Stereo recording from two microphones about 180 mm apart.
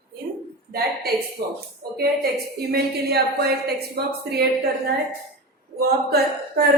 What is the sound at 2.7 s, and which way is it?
Speech, 60° right (ahead or behind).